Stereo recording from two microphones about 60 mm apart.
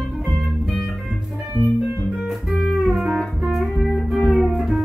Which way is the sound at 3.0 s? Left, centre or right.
Centre.